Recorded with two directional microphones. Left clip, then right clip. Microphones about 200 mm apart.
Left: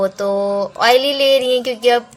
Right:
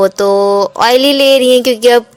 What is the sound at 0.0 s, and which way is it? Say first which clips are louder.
Speech: right 8 dB; 40° right (ahead or behind).